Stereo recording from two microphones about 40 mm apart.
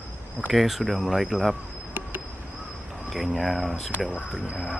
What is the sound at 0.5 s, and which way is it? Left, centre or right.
Speech, centre.